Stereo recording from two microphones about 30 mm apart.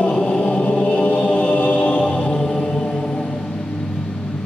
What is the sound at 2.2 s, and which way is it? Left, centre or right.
Mantra, left.